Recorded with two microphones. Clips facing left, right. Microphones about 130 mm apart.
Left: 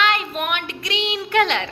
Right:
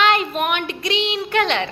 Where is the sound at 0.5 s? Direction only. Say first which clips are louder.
Right 4 dB; centre (ahead or behind).